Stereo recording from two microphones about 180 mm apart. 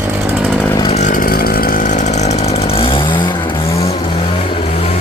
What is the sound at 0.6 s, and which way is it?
Chainsaw, 20° left (ahead or behind).